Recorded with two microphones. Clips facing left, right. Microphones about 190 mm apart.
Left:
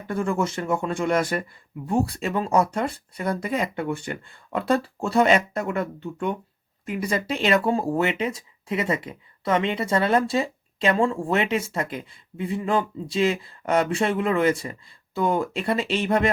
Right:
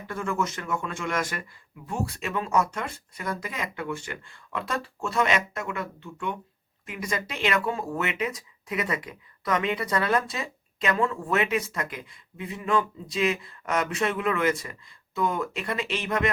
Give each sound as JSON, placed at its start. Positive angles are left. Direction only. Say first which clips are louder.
{"t": 0.1, "sound": "speech", "louder": "left 5 dB", "side_deg": 30}